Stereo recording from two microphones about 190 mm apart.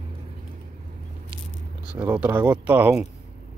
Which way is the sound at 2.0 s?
10° right (ahead or behind).